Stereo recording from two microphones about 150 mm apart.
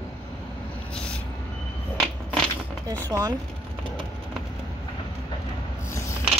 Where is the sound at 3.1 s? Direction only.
25° right (ahead or behind).